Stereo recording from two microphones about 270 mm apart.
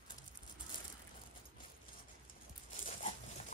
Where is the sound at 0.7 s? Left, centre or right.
Centre.